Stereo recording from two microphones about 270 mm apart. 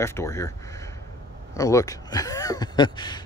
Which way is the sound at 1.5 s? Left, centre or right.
Centre.